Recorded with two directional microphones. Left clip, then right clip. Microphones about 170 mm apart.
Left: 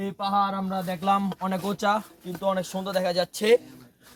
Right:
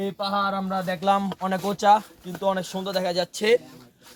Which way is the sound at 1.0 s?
5° left (ahead or behind).